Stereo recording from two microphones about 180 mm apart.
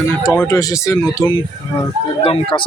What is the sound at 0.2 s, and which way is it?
Speech, 15° left (ahead or behind).